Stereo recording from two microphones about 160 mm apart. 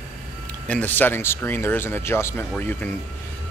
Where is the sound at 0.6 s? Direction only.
10° left (ahead or behind).